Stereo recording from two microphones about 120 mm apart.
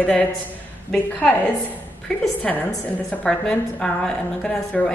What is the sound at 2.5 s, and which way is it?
A woman's voice, 5° left (ahead or behind).